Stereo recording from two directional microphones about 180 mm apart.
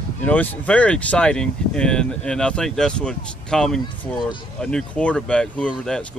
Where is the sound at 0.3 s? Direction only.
10° left (ahead or behind).